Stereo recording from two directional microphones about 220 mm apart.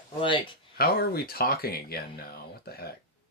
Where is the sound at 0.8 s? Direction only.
45° left (ahead or behind).